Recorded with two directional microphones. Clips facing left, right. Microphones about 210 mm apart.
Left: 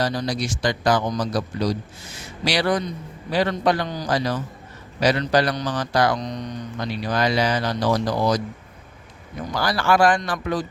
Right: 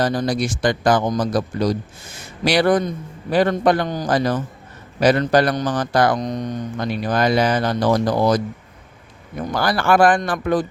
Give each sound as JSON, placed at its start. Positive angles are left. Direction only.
{"t": 0.0, "sound": "speech", "side_deg": -50}
{"t": 9.5, "sound": "speech", "side_deg": -55}